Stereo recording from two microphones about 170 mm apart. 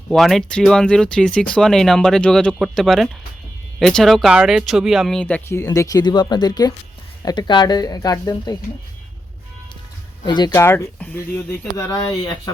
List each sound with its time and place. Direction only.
0.1 s speech: centre (ahead or behind); by 8.5 s 20° left (ahead or behind)
10.2 s speech: 25° left (ahead or behind)